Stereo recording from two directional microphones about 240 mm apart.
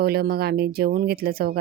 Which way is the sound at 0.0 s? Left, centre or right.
Right.